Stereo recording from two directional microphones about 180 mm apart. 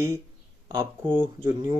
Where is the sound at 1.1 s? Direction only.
15° right (ahead or behind).